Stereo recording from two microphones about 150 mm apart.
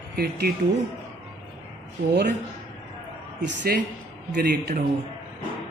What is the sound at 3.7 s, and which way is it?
Speech, 90° right.